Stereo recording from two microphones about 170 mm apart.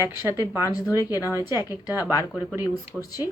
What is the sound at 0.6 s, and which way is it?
Speech, 20° left (ahead or behind).